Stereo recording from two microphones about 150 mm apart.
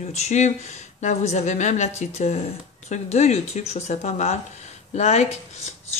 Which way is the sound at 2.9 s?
50° left (ahead or behind).